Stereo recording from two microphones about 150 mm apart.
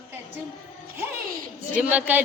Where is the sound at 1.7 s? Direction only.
10° right (ahead or behind).